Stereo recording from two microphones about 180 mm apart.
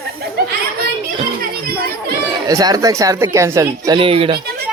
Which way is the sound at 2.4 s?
20° right (ahead or behind).